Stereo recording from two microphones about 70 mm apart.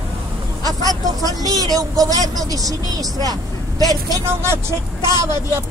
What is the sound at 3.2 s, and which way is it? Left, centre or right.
Vehicle, left.